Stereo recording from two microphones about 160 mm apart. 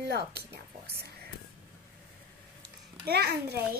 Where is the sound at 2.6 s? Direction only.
90° right.